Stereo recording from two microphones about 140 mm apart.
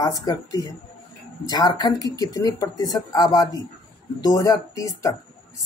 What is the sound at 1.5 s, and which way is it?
Speech, 30° left (ahead or behind).